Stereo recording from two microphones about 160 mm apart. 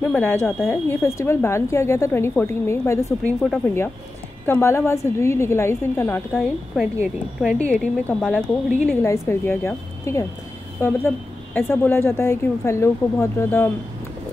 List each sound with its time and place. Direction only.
0.1 s a woman's voice: 10° left (ahead or behind)
6.7 s speech: centre (ahead or behind)
9.0 s a woman's voice: 15° left (ahead or behind)